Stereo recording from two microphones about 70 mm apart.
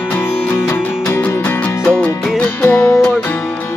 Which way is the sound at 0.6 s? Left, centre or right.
Left.